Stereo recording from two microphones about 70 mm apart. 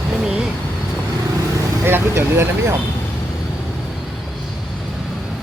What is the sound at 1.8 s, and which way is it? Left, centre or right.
Speech, right.